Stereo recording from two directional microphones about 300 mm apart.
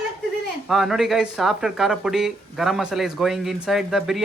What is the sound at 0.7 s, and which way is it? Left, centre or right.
Speech, centre.